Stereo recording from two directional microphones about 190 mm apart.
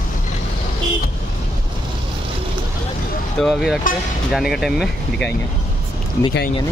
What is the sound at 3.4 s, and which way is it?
Speech, centre (ahead or behind).